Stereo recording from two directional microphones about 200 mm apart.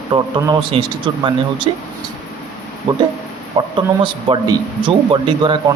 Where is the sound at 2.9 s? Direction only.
25° right (ahead or behind).